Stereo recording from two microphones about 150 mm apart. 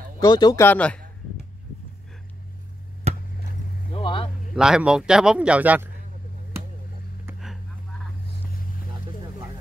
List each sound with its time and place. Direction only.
0.2 s speech: 30° left (ahead or behind)
0.6 s speech: 10° left (ahead or behind)
3.1 s chop: 45° right (ahead or behind)
3.9 s vehicle: 35° left (ahead or behind)
4.6 s speech: 5° right (ahead or behind)